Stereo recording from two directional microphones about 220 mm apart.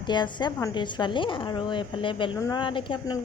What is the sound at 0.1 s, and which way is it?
A woman's voice, 20° left (ahead or behind).